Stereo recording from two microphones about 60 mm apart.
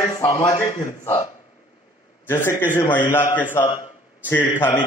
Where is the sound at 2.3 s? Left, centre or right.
Left.